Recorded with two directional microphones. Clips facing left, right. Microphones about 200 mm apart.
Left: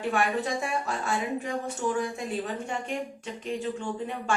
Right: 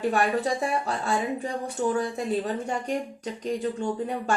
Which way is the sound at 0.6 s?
35° right (ahead or behind).